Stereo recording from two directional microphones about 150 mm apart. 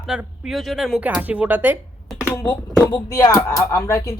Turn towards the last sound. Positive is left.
turn(degrees=20)  # may be behind; listen again after turning